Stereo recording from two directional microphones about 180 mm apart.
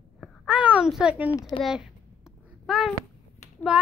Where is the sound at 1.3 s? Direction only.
20° left (ahead or behind).